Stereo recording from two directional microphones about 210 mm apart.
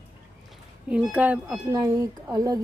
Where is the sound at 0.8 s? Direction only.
5° right (ahead or behind).